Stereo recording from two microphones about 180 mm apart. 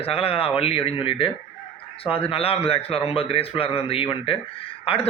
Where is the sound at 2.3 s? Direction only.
30° left (ahead or behind).